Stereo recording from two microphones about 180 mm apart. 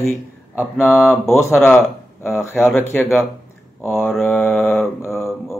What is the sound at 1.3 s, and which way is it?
Speech, 15° left (ahead or behind).